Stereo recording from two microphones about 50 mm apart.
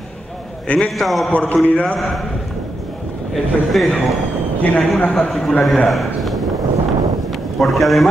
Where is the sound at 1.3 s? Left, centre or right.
Left.